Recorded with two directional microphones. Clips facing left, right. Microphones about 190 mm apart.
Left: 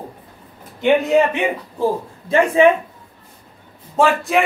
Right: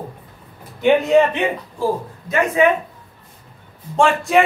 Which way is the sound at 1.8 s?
30° left (ahead or behind).